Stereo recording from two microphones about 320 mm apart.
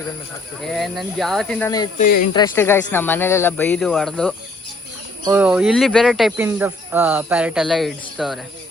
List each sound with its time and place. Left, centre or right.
0.6 s speech: centre
2.0 s speech: left
2.3 s speech: centre